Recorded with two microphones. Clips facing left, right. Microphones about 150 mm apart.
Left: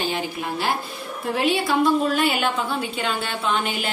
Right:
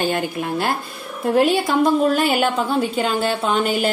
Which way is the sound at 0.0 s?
55° right (ahead or behind).